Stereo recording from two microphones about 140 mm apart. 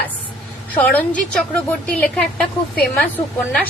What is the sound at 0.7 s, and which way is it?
A woman's voice, 10° left (ahead or behind).